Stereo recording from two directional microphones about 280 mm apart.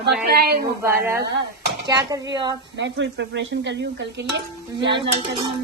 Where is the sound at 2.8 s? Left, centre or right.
Right.